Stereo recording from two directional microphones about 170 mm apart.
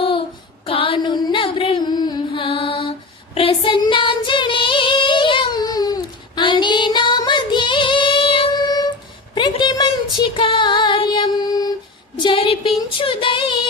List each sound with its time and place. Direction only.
0.6 s child singing: 30° left (ahead or behind)
9.3 s female singing: 25° left (ahead or behind)
12.1 s a sound: 30° left (ahead or behind)